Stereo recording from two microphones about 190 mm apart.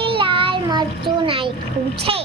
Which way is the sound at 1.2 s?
30° right (ahead or behind).